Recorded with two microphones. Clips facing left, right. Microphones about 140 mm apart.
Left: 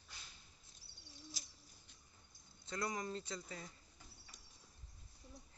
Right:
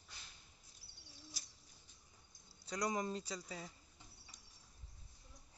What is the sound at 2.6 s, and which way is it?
Speech, 15° right (ahead or behind).